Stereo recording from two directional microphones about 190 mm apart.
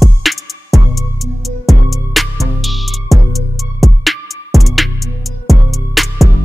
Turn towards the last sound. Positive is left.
turn(degrees=0)  # may be behind; listen again after turning